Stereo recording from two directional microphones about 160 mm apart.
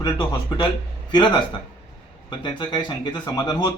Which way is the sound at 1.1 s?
30° left (ahead or behind).